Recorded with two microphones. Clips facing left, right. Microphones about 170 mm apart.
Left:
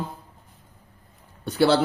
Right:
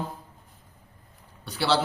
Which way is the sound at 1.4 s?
50° left (ahead or behind).